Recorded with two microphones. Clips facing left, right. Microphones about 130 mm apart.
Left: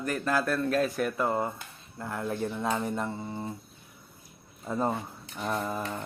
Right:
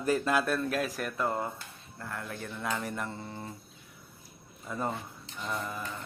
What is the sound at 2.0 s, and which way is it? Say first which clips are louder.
Speech: left 7 dB; 20° left (ahead or behind).